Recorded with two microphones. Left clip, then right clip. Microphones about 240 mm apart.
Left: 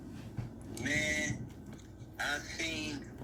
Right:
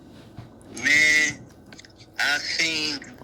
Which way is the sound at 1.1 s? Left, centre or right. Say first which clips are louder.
Right 15 dB; right.